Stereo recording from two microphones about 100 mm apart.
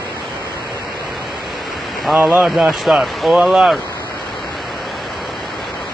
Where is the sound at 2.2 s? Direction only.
20° right (ahead or behind).